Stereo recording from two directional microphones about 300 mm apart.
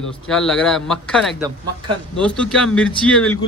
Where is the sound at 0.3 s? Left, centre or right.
Centre.